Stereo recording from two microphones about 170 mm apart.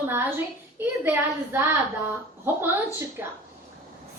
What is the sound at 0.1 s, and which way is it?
A woman's voice, 10° right (ahead or behind).